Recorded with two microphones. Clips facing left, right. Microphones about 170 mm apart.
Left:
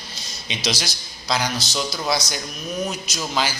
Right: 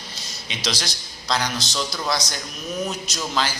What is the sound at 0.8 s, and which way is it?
A man's voice, 5° left (ahead or behind).